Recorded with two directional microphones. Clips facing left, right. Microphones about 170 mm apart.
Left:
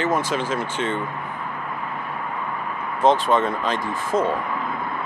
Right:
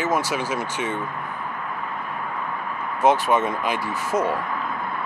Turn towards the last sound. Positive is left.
turn(degrees=20)  # may be behind; listen again after turning